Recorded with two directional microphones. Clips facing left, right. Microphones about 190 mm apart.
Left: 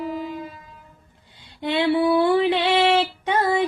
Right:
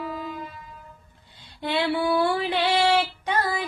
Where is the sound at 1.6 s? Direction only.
20° left (ahead or behind).